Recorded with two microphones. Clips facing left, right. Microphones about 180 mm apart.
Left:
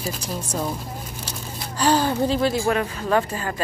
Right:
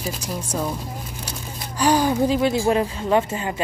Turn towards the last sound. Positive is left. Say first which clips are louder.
# right 2 dB
turn(degrees=-20)  # may be behind; listen again after turning